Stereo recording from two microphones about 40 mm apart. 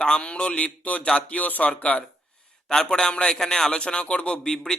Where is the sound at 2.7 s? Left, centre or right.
Centre.